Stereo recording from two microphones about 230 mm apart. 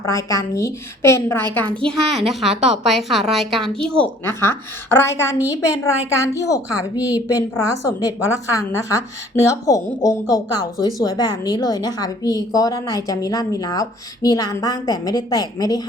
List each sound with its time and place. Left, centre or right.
0.0 s a woman's voice: centre